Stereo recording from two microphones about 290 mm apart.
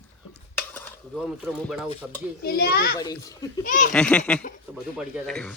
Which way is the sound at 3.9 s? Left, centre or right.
Centre.